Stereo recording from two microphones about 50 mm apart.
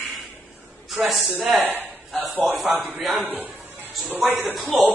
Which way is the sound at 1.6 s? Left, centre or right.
Right.